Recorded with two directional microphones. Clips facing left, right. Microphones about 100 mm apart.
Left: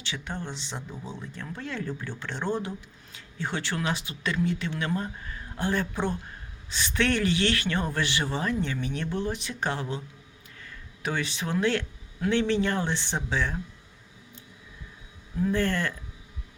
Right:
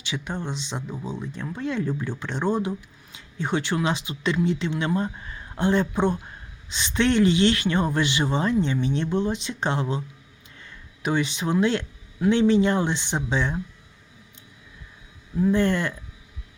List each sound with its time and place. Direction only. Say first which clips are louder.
0.0 s speech: right 4 dB; 15° right (ahead or behind)
15.4 s speech: right 5 dB; 15° right (ahead or behind)